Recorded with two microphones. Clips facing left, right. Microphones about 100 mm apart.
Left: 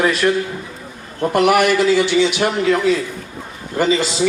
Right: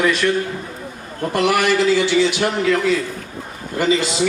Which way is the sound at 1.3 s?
55° left (ahead or behind).